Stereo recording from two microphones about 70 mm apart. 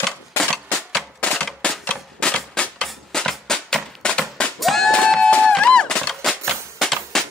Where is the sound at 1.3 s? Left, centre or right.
Centre.